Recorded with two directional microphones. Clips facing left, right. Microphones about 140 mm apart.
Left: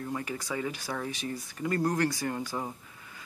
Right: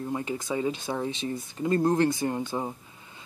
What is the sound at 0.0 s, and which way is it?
Speech, 25° right (ahead or behind).